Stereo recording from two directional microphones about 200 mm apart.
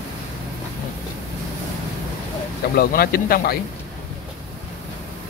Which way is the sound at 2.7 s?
45° left (ahead or behind).